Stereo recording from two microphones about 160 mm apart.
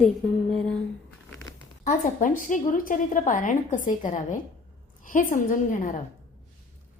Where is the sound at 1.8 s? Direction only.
55° left (ahead or behind).